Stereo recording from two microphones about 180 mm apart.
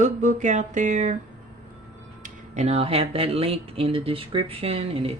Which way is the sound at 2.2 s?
40° right (ahead or behind).